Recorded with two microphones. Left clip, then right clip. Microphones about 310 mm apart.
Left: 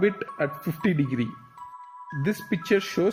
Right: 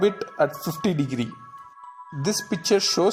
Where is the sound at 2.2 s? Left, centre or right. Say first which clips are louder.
Right 3 dB; right.